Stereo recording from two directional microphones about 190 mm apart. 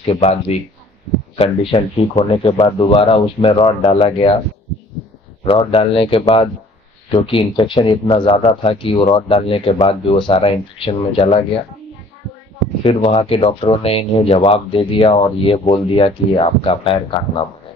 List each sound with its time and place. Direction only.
0.0 s a man's voice: 35° left (ahead or behind)
5.4 s speech: 30° left (ahead or behind)
12.8 s speech: 30° left (ahead or behind)